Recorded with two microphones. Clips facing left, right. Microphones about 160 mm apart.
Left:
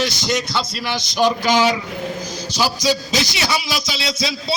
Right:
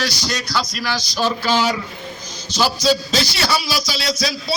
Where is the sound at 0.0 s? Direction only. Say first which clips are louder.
Left 4 dB; 20° left (ahead or behind).